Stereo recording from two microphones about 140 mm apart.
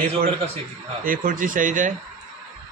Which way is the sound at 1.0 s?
80° right.